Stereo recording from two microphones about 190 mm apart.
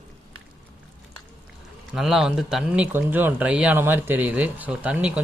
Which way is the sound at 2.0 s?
Centre (ahead or behind).